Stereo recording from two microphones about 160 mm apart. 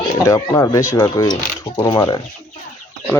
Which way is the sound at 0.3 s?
20° left (ahead or behind).